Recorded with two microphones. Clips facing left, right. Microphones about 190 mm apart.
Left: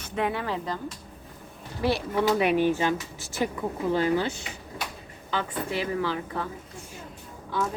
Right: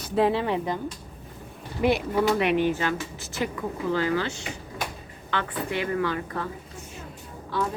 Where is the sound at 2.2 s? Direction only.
5° left (ahead or behind).